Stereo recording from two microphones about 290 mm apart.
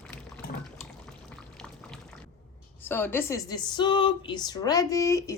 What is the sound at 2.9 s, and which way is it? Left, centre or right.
Speech, centre.